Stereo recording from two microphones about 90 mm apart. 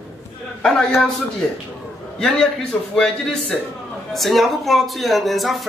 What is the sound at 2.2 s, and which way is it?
Speech, 5° left (ahead or behind).